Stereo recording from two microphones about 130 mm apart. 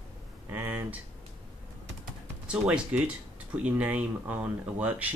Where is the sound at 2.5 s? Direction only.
10° right (ahead or behind).